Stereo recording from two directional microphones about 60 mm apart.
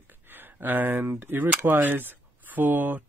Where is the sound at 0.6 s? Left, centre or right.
Right.